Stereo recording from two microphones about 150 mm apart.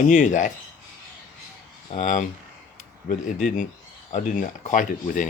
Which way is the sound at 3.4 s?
60° left (ahead or behind).